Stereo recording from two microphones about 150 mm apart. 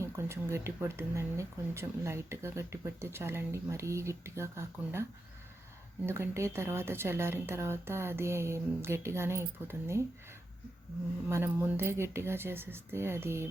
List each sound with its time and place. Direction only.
0.0 s speech: 15° right (ahead or behind)
6.1 s speech: 15° right (ahead or behind)
11.3 s speech: 15° right (ahead or behind)